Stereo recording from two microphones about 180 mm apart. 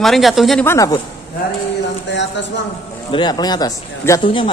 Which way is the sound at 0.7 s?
15° left (ahead or behind).